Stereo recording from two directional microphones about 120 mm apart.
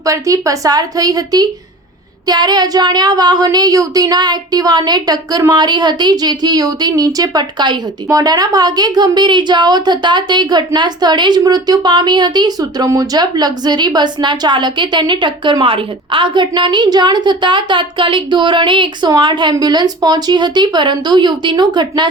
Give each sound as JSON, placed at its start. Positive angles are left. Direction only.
{"t": 0.0, "sound": "a woman's voice", "side_deg": -30}